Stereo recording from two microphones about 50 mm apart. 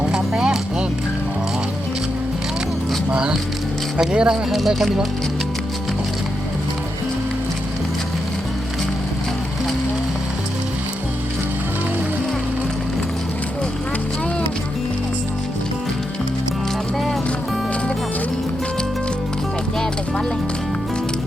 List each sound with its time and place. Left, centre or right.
0.1 s a sound: centre
3.1 s music: centre
4.1 s speech: centre
4.5 s speech: centre